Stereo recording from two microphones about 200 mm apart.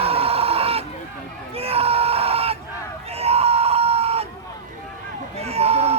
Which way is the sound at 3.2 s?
30° right (ahead or behind).